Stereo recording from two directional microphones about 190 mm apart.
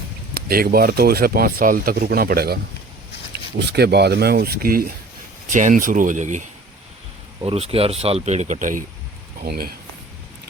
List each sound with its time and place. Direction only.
0.3 s speech: 50° right (ahead or behind)
3.6 s speech: 60° right (ahead or behind); by 6.4 s 40° right (ahead or behind)
7.4 s speech: 30° right (ahead or behind); by 9.7 s 50° right (ahead or behind)